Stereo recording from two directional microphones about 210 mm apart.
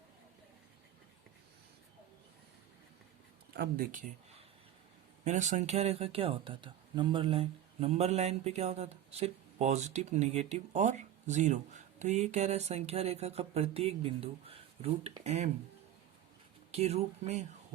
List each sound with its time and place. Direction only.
3.5 s speech: 45° right (ahead or behind)
5.2 s speech: 35° right (ahead or behind)
16.7 s speech: 30° right (ahead or behind)